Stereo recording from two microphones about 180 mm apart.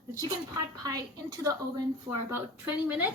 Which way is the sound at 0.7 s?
20° right (ahead or behind).